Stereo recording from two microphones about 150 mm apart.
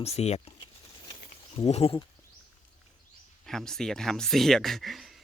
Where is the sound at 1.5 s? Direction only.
45° left (ahead or behind).